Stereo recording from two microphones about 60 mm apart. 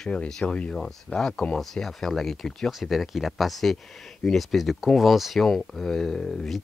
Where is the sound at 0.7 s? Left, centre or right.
Centre.